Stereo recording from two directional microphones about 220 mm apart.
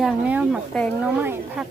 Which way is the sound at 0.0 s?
5° right (ahead or behind).